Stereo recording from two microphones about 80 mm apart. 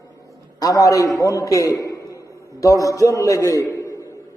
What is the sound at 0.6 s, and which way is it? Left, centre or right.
A man's voice, left.